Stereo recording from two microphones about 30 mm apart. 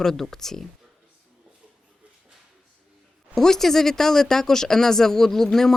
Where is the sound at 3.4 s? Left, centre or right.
Centre.